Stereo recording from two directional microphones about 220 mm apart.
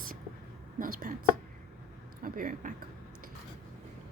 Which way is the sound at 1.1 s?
40° right (ahead or behind).